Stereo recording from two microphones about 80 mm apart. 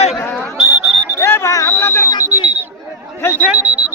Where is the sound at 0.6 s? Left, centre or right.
Right.